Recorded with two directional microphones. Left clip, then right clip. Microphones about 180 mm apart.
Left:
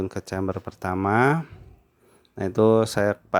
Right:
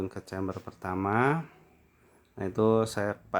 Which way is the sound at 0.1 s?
30° left (ahead or behind).